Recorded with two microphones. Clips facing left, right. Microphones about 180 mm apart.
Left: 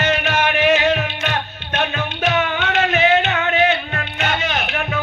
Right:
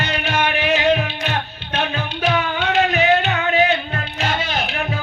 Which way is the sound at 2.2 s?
35° right (ahead or behind).